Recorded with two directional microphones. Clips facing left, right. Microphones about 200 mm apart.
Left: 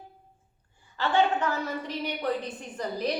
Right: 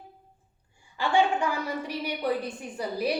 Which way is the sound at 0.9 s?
10° right (ahead or behind).